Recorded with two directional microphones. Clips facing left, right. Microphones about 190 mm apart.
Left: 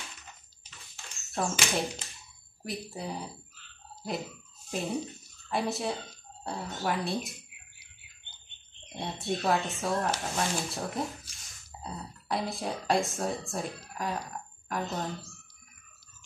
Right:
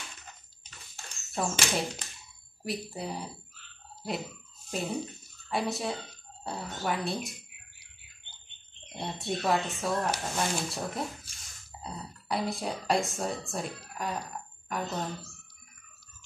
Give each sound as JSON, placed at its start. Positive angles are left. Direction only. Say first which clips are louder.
{"t": 1.3, "sound": "speech", "louder": "even", "side_deg": 0}
{"t": 4.0, "sound": "jingle bell", "louder": "even", "side_deg": 0}
{"t": 5.5, "sound": "speech", "louder": "even", "side_deg": 0}
{"t": 8.8, "sound": "speech", "louder": "left 1 dB", "side_deg": 0}